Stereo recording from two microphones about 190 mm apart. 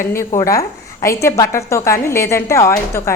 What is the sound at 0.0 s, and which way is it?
A woman's voice, 15° left (ahead or behind).